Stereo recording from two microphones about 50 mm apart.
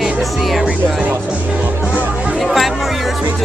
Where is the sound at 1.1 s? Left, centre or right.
Right.